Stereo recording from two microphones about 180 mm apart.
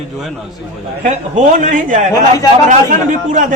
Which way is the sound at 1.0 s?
45° right (ahead or behind).